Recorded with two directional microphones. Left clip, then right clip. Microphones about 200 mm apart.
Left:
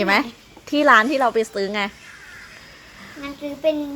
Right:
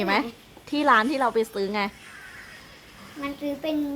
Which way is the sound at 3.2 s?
25° right (ahead or behind).